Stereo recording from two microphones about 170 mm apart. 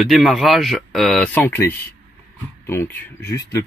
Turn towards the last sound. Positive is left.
turn(degrees=15)  # may be behind; listen again after turning